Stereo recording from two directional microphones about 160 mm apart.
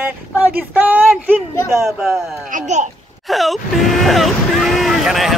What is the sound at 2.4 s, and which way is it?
Speech, 50° right (ahead or behind).